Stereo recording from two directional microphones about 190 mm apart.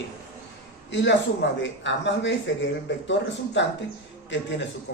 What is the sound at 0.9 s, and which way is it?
Speech, 70° left (ahead or behind).